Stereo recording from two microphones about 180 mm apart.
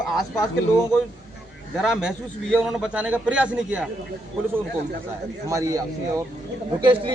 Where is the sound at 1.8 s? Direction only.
Centre (ahead or behind).